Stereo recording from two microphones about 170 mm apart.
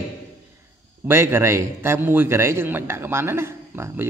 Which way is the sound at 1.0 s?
15° right (ahead or behind).